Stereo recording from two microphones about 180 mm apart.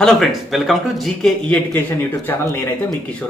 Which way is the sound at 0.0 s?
Centre (ahead or behind).